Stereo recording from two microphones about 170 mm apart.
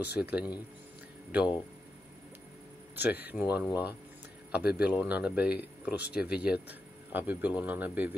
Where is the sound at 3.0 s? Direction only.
10° right (ahead or behind).